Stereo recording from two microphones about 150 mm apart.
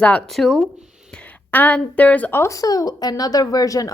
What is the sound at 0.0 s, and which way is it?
A woman's voice, 10° left (ahead or behind).